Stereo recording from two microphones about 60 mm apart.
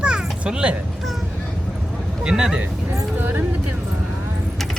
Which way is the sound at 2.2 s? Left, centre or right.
Centre.